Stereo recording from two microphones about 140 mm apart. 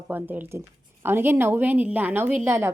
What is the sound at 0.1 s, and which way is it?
A woman's voice, 15° right (ahead or behind).